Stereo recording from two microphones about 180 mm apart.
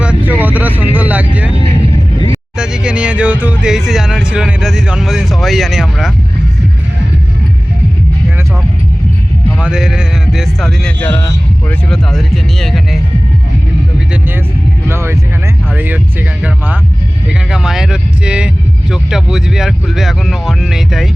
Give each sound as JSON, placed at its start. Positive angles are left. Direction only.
{"t": 0.0, "sound": "vehicle", "side_deg": -5}
{"t": 1.7, "sound": "vehicle", "side_deg": 20}
{"t": 2.6, "sound": "speech", "side_deg": -5}
{"t": 9.6, "sound": "speech", "side_deg": -5}
{"t": 11.0, "sound": "speech", "side_deg": 15}
{"t": 11.9, "sound": "speech", "side_deg": 0}
{"t": 14.8, "sound": "speech", "side_deg": -15}
{"t": 17.5, "sound": "speech", "side_deg": -5}